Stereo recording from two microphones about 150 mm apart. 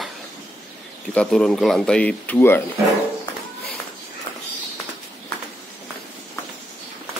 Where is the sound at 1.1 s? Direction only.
Centre (ahead or behind).